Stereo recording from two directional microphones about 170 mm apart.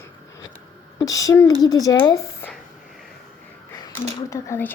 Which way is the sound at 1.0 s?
20° left (ahead or behind).